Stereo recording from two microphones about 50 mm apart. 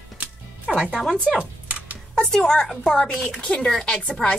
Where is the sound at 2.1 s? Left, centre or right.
Centre.